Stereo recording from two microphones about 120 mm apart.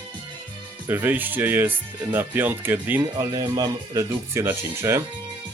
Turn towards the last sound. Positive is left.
turn(degrees=-20)  # may be behind; listen again after turning